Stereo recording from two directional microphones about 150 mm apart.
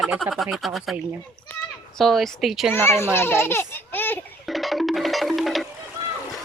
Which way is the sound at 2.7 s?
15° left (ahead or behind).